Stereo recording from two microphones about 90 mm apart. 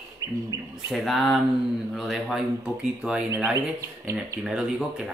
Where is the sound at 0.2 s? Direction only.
40° right (ahead or behind).